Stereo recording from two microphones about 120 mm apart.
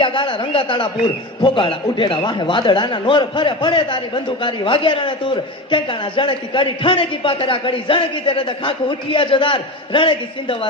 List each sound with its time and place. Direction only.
0.0 s a man's voice: 45° left (ahead or behind)